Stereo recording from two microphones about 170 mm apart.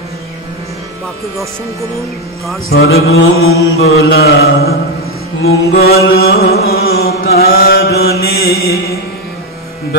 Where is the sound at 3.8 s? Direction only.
70° left (ahead or behind).